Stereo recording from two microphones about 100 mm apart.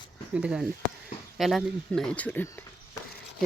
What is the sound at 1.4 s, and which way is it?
Speech, centre (ahead or behind).